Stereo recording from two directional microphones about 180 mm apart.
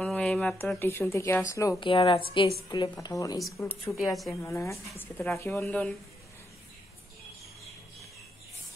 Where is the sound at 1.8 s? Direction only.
30° left (ahead or behind); by 5.9 s 5° left (ahead or behind).